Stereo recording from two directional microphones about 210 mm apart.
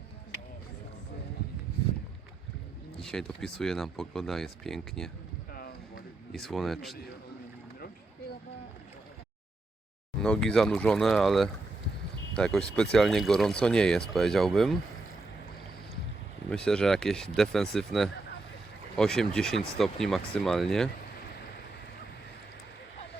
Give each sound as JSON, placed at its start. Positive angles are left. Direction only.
{"t": 3.0, "sound": "speech", "side_deg": 0}
{"t": 5.5, "sound": "a sound", "side_deg": 45}
{"t": 6.3, "sound": "speech", "side_deg": 0}
{"t": 10.2, "sound": "speech", "side_deg": 5}
{"t": 16.5, "sound": "speech", "side_deg": 5}